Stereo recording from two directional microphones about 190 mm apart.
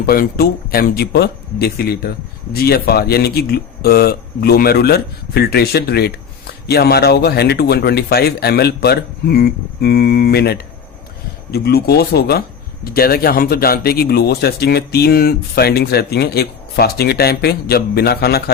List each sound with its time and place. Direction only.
0.0 s speech: 55° left (ahead or behind)